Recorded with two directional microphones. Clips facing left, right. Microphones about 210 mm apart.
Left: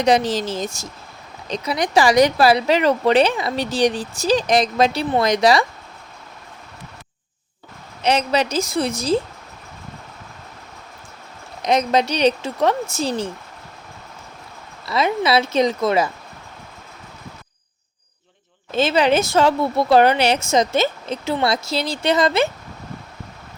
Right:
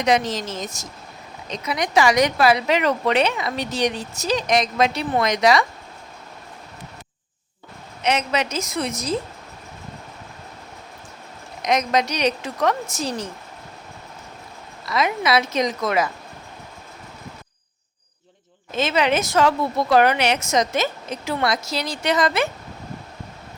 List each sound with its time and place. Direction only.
0.0 s speech: 35° left (ahead or behind)
8.0 s speech: 35° left (ahead or behind)
11.6 s speech: 30° left (ahead or behind)
14.8 s speech: 30° left (ahead or behind)
18.7 s speech: 30° left (ahead or behind)